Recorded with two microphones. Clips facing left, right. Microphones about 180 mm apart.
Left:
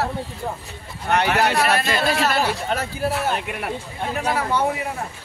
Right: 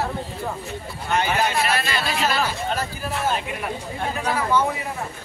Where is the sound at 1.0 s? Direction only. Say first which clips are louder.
Left 3 dB; 65° left (ahead or behind).